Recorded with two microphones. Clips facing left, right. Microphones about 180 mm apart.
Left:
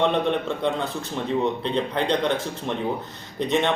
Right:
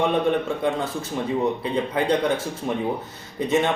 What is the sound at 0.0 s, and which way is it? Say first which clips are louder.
Speech: right 1 dB; 5° right (ahead or behind).